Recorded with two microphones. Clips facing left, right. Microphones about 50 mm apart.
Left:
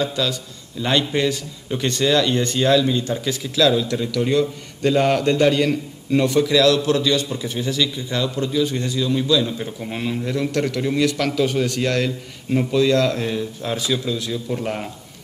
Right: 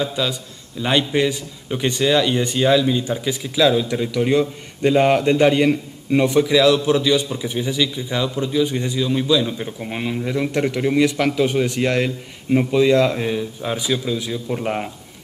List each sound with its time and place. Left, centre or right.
0.0 s a man's voice: centre